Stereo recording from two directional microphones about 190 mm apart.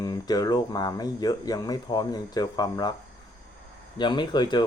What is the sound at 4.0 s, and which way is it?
Speech, 25° left (ahead or behind).